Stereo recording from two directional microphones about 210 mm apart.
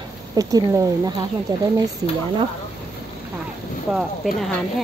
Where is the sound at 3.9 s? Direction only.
Centre (ahead or behind).